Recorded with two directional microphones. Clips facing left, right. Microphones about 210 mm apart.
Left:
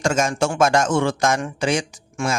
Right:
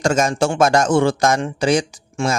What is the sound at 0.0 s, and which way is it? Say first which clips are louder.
A man's voice: right 3 dB; 35° right (ahead or behind).